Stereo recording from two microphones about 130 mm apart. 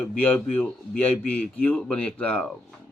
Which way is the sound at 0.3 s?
10° left (ahead or behind).